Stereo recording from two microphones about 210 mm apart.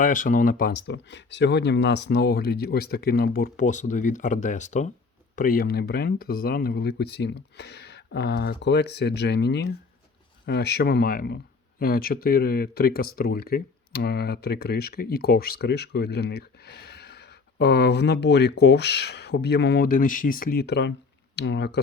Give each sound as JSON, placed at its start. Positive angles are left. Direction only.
{"t": 0.0, "sound": "speech", "side_deg": 40}